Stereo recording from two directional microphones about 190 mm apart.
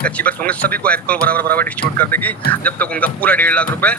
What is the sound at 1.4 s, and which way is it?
Speech, 50° right (ahead or behind).